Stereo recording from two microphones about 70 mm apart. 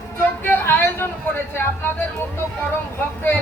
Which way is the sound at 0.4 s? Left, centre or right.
Left.